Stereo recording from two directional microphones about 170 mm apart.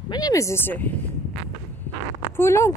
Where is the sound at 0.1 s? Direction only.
20° left (ahead or behind).